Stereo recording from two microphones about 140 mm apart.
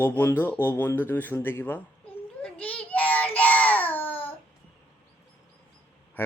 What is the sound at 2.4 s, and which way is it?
Child singing, 10° left (ahead or behind).